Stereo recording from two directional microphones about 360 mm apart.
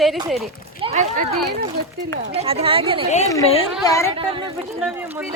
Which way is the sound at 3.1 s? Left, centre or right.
Centre.